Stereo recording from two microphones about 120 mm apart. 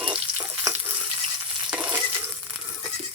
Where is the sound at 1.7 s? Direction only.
10° right (ahead or behind).